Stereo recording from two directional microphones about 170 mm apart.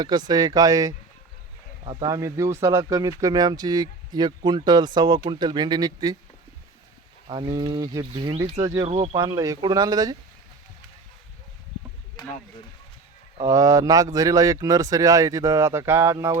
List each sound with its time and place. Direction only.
0.0 s speech: 25° right (ahead or behind)
7.3 s speech: 30° right (ahead or behind)
13.4 s speech: 20° right (ahead or behind)